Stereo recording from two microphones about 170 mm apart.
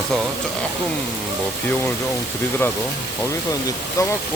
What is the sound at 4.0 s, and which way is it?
Speech, 20° left (ahead or behind).